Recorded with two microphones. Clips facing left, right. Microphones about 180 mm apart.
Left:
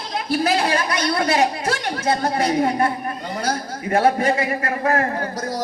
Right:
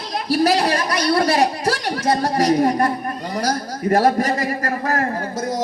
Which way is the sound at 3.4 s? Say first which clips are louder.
Right 4 dB; 35° right (ahead or behind).